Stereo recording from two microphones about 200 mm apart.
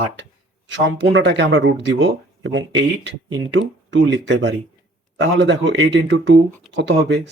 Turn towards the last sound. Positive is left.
turn(degrees=-60)  # may be behind; listen again after turning